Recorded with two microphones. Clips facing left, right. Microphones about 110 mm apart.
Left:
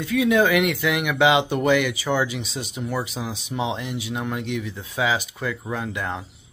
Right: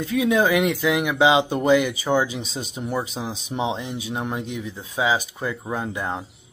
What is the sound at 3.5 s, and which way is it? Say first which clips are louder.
Speech: right 1 dB; 30° right (ahead or behind).